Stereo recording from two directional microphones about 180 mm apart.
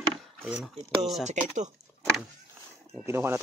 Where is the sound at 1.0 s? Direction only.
Centre (ahead or behind).